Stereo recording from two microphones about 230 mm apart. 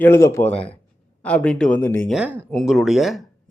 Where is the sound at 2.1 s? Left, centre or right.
Centre.